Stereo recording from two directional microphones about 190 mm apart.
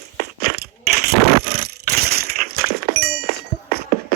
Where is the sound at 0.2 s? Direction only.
55° right (ahead or behind).